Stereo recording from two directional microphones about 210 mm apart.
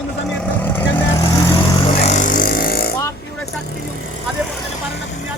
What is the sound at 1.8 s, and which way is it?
Music, 30° left (ahead or behind).